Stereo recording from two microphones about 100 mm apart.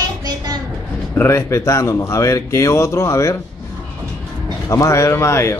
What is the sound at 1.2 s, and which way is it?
Speech, 25° left (ahead or behind).